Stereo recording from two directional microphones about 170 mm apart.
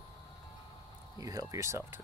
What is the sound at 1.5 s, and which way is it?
Speech, 15° right (ahead or behind).